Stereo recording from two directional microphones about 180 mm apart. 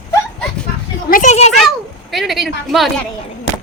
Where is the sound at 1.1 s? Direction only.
45° left (ahead or behind).